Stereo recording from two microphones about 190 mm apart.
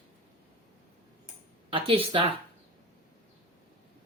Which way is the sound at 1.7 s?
30° right (ahead or behind).